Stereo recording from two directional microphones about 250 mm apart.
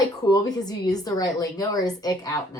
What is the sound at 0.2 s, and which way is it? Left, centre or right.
Speech, centre.